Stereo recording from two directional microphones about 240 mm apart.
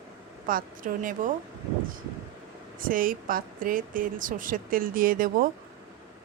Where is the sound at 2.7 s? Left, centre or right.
Right.